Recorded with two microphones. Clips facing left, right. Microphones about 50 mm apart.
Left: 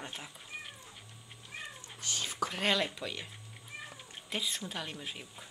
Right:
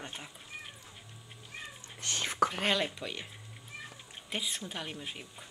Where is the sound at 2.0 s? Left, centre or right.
Right.